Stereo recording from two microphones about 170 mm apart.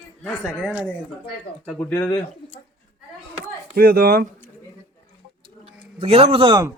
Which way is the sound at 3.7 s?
60° right (ahead or behind).